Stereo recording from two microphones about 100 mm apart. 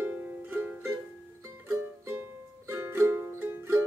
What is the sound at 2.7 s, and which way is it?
Music, 25° right (ahead or behind).